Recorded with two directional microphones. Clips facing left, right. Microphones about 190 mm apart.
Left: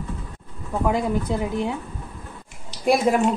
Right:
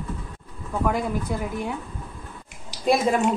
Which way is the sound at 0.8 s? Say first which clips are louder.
Left 3 dB; 20° left (ahead or behind).